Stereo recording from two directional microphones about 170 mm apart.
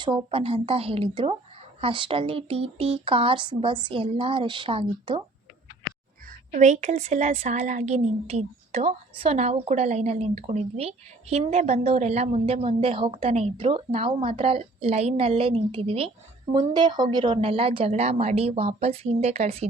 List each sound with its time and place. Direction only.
0.0 s a woman's voice: 25° right (ahead or behind)
6.5 s a woman's voice: 45° right (ahead or behind)